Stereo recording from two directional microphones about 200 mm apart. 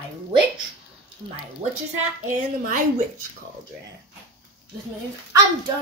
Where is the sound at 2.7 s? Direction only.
40° right (ahead or behind).